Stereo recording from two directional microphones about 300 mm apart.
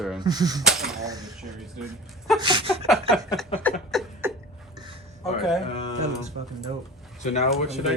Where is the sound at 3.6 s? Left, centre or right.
Centre.